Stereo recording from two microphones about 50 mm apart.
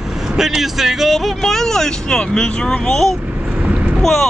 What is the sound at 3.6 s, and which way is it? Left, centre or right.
Vehicle, right.